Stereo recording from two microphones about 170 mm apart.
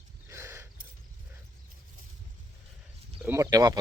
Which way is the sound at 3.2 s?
15° right (ahead or behind).